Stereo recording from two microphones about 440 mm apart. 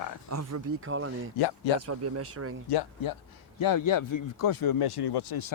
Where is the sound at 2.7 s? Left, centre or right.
Left.